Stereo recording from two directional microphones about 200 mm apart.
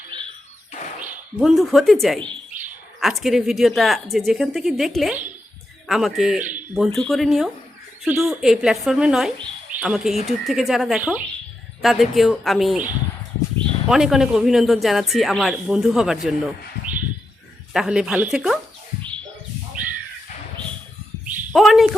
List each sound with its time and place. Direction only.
1.4 s speech: centre (ahead or behind)
2.5 s bird: 40° right (ahead or behind)
3.0 s speech: centre (ahead or behind)
8.0 s speech: 10° right (ahead or behind)
8.3 s speech: centre (ahead or behind)
17.7 s speech: 5° right (ahead or behind)
21.5 s speech: centre (ahead or behind)